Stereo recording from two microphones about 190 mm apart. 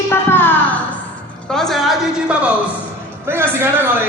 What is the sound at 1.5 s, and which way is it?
Speech, centre (ahead or behind).